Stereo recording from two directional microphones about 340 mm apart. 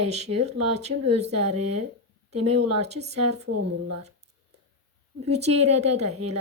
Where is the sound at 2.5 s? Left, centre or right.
Right.